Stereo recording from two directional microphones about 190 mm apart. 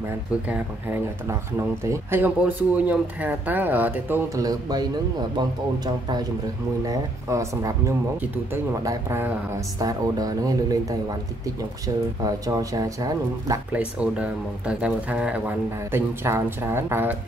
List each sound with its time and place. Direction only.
0.5 s speech: 10° right (ahead or behind)
6.8 s speech: 15° right (ahead or behind)
8.8 s speech: 15° right (ahead or behind)
13.7 s speech: 5° right (ahead or behind)